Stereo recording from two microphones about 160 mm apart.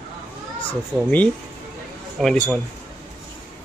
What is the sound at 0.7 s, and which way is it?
A man's voice, 10° left (ahead or behind).